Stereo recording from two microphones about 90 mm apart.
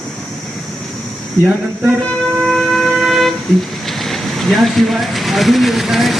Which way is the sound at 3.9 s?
Centre (ahead or behind).